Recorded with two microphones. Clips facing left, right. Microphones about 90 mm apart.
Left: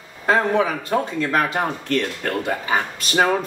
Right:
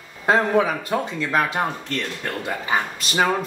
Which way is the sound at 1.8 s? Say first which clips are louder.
Left 5 dB; 50° left (ahead or behind).